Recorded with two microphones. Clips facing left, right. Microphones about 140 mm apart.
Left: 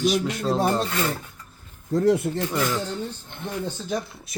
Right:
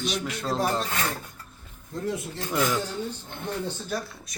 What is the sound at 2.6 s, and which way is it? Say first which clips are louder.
Speech: right 3 dB; 10° right (ahead or behind).